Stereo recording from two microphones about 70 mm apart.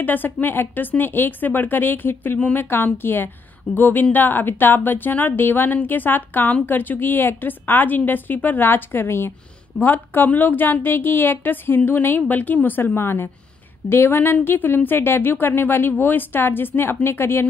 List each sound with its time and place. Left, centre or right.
0.0 s a woman's voice: left